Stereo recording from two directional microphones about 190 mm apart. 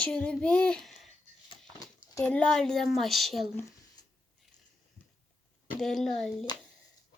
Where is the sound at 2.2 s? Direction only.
5° left (ahead or behind).